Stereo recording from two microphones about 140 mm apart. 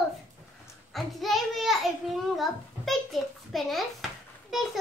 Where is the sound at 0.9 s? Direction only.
Centre (ahead or behind).